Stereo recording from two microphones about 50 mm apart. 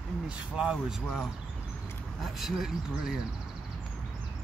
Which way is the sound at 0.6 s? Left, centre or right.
Centre.